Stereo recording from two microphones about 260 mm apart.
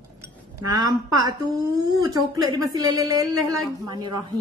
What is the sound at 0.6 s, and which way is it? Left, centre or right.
Speech, centre.